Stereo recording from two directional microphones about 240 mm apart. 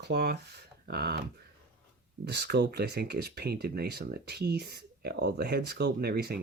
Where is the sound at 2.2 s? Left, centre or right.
Right.